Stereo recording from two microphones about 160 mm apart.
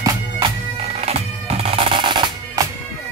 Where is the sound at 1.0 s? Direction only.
40° right (ahead or behind).